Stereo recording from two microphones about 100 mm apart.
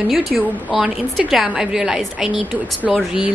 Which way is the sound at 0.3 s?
Centre (ahead or behind).